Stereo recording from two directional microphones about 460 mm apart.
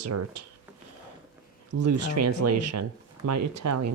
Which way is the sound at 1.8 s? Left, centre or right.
Right.